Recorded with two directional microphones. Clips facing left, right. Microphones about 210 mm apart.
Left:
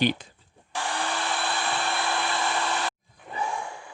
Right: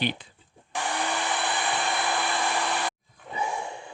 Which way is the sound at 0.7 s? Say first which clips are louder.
Right 1 dB; 15° right (ahead or behind).